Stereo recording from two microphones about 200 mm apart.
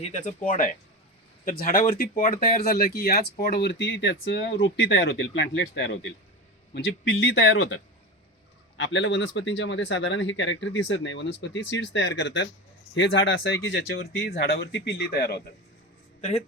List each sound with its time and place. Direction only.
0.0 s speech: 35° left (ahead or behind); by 7.8 s 65° left (ahead or behind)
8.8 s speech: 65° left (ahead or behind)